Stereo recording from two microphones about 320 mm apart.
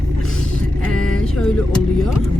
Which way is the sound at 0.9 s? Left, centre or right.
Left.